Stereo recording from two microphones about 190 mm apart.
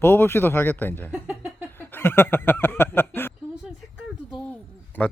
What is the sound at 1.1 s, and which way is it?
Speech, 5° right (ahead or behind).